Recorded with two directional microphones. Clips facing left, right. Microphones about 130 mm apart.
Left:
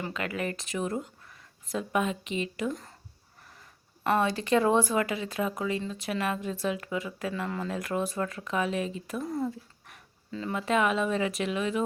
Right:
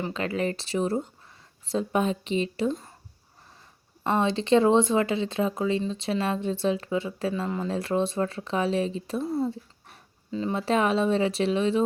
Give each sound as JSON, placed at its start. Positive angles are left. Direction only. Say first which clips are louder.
{"t": 0.0, "sound": "speech", "louder": "right 5 dB", "side_deg": -30}
{"t": 4.0, "sound": "speech", "louder": "right 2 dB", "side_deg": -25}